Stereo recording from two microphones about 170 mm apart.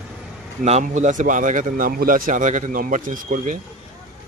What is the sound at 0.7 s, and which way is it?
A man's voice, 45° right (ahead or behind).